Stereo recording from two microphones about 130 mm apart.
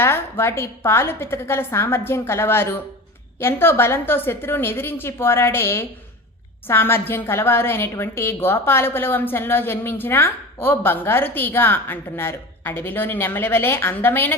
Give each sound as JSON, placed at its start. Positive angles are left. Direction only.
{"t": 0.0, "sound": "a woman's voice", "side_deg": 20}